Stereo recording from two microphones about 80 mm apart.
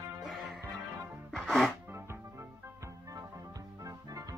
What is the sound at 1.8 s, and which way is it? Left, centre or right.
Music, right.